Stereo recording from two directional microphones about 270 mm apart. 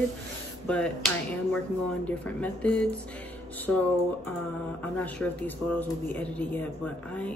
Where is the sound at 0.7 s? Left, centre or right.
Centre.